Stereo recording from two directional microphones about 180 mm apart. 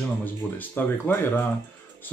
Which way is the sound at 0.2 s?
10° left (ahead or behind).